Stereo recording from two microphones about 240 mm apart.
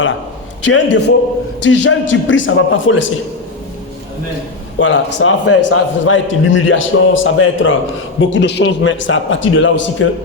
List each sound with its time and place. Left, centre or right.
0.6 s a man's voice: left
4.8 s a man's voice: left